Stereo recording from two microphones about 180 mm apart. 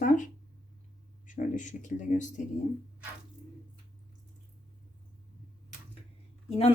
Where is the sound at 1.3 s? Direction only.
45° left (ahead or behind).